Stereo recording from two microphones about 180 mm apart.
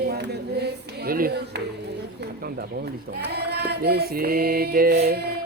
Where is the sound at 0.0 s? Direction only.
65° right (ahead or behind).